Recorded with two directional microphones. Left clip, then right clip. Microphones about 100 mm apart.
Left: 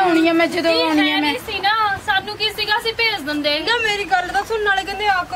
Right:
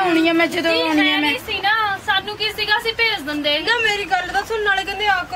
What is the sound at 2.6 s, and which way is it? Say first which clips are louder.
A woman's voice: right 1 dB; 15° left (ahead or behind).